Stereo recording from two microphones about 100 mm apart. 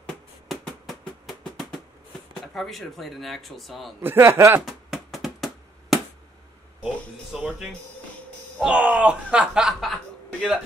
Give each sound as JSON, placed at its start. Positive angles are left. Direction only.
{"t": 0.5, "sound": "drum", "side_deg": 0}
{"t": 2.4, "sound": "speech", "side_deg": 0}
{"t": 4.0, "sound": "speech", "side_deg": -20}
{"t": 4.6, "sound": "a sound", "side_deg": -5}
{"t": 7.3, "sound": "speech", "side_deg": -5}